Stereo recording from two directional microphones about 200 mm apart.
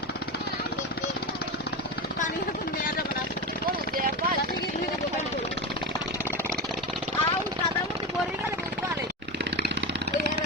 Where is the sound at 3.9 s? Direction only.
45° right (ahead or behind).